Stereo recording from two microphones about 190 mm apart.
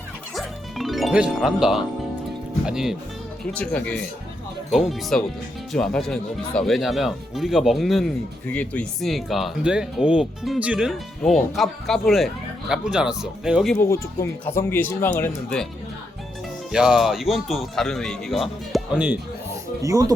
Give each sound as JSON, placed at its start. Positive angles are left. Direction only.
{"t": 0.3, "sound": "music", "side_deg": 0}
{"t": 2.6, "sound": "speech", "side_deg": -5}
{"t": 13.7, "sound": "speech", "side_deg": 15}
{"t": 16.7, "sound": "speech", "side_deg": -5}
{"t": 19.8, "sound": "speech", "side_deg": -15}